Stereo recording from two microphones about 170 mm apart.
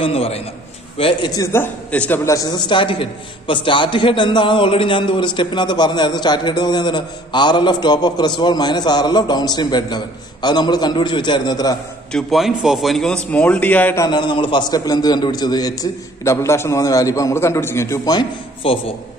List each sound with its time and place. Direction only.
0.0 s a man's voice: 35° left (ahead or behind)
12.1 s a man's voice: centre (ahead or behind); by 18.2 s 20° left (ahead or behind)
18.6 s a man's voice: 35° left (ahead or behind)